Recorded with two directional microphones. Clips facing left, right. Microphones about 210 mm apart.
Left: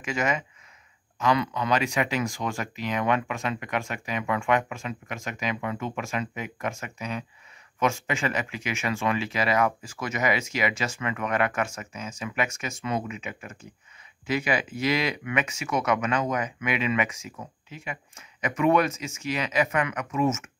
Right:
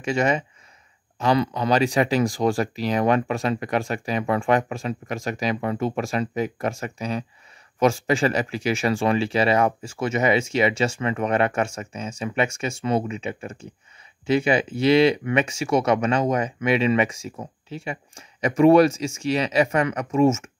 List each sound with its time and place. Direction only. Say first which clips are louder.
0.0 s speech: right 6 dB; 30° right (ahead or behind)